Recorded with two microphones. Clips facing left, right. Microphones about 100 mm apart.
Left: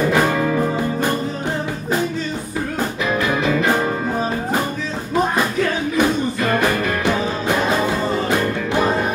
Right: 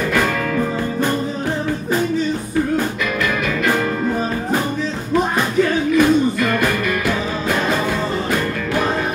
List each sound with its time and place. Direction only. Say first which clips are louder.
0.0 s music: left 2 dB; 20° left (ahead or behind)
5.9 s music: right 5 dB; 20° left (ahead or behind)